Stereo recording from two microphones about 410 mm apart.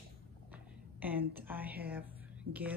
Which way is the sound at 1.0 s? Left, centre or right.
Centre.